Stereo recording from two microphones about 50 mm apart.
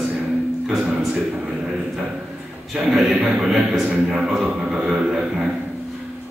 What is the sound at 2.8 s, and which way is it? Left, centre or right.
A man's voice, centre.